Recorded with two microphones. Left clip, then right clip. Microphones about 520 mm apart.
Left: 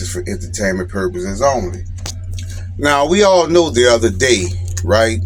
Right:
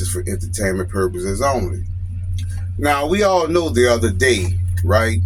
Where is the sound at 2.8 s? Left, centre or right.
Right.